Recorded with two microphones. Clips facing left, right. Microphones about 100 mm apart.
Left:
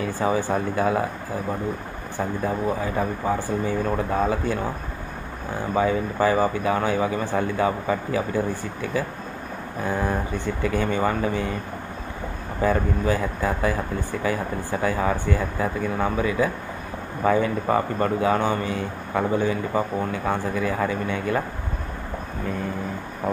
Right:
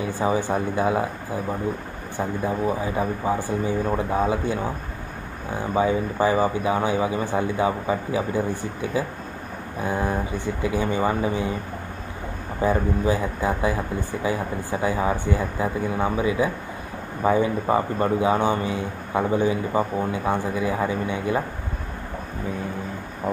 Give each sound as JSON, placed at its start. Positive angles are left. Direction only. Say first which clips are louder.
{"t": 0.0, "sound": "a man's voice", "louder": "even", "side_deg": -20}
{"t": 5.8, "sound": "a man's voice", "louder": "even", "side_deg": -20}
{"t": 12.6, "sound": "a man's voice", "louder": "even", "side_deg": -15}
{"t": 23.3, "sound": "speech", "louder": "even", "side_deg": -5}